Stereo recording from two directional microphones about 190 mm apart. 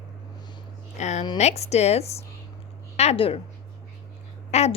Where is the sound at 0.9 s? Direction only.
40° left (ahead or behind).